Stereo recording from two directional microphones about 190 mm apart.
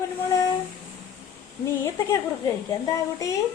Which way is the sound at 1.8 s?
15° left (ahead or behind).